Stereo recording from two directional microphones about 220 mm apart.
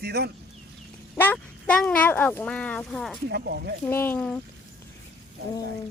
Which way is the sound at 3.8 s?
10° left (ahead or behind).